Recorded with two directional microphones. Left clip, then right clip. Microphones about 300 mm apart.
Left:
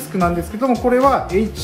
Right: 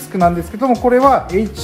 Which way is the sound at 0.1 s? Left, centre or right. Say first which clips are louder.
Right 5 dB; centre.